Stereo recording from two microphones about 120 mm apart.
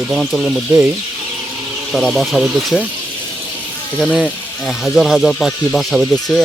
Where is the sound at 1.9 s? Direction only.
Centre (ahead or behind).